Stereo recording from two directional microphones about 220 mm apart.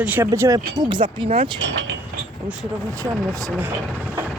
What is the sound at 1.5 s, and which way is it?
Speech, 55° right (ahead or behind).